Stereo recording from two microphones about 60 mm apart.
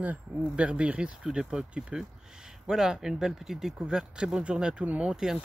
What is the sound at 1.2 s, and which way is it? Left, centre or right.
Speech, centre.